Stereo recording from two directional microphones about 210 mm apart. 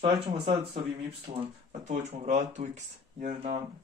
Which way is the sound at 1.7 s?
35° right (ahead or behind).